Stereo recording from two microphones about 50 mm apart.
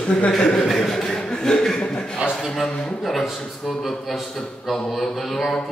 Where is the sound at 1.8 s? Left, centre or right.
Centre.